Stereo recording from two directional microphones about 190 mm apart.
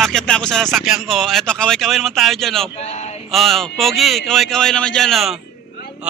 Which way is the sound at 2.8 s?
35° left (ahead or behind).